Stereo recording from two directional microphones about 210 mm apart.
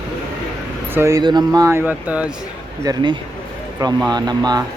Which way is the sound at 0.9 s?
15° right (ahead or behind).